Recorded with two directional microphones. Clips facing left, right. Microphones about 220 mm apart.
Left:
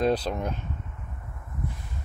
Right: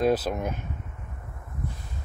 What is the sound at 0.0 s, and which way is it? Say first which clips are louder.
Speech: right 1 dB; 5° right (ahead or behind).